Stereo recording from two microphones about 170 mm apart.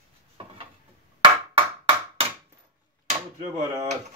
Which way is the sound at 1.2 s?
35° right (ahead or behind).